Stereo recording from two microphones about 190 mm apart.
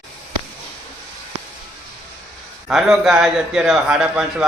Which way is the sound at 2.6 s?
Centre (ahead or behind).